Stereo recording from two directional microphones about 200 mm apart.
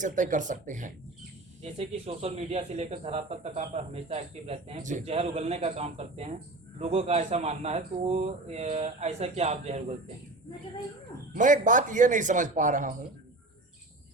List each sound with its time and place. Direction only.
0.0 s speech: 40° right (ahead or behind)
1.6 s speech: 30° right (ahead or behind)
11.3 s speech: 40° right (ahead or behind)